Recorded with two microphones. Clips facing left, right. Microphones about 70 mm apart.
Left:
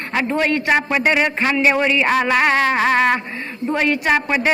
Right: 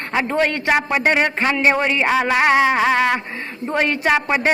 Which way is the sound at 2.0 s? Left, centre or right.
Centre.